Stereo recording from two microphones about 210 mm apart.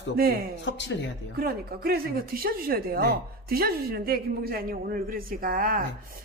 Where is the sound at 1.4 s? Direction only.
45° right (ahead or behind).